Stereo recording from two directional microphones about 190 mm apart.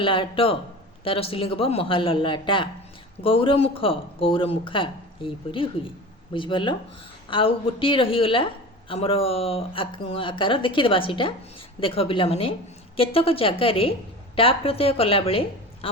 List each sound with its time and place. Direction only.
0.0 s speech: 25° left (ahead or behind)